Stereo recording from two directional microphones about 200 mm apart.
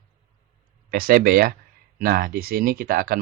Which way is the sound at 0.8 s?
45° right (ahead or behind).